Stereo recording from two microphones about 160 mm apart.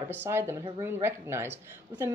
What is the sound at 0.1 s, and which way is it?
A woman's voice, 15° right (ahead or behind).